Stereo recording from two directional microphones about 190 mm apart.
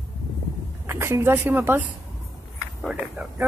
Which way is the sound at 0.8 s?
15° right (ahead or behind).